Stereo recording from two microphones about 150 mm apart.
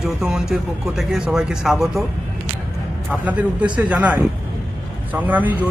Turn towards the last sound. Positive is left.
turn(degrees=-10)  # may be behind; listen again after turning